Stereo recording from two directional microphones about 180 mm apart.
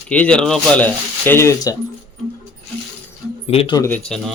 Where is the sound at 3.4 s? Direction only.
30° left (ahead or behind).